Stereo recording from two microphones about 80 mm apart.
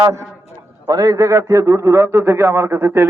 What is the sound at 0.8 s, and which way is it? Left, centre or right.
A man's voice, right.